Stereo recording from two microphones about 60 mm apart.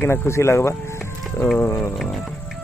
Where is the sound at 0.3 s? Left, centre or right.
Left.